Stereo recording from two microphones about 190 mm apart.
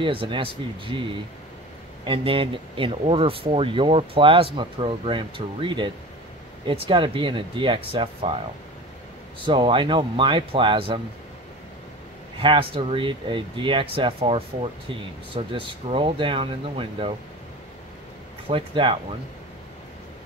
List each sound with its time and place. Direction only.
0.0 s speech: 25° right (ahead or behind)
9.4 s speech: 25° right (ahead or behind)
12.4 s speech: 30° right (ahead or behind)
18.5 s speech: 25° right (ahead or behind)